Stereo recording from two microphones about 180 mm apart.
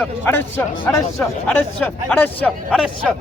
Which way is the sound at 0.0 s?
10° left (ahead or behind).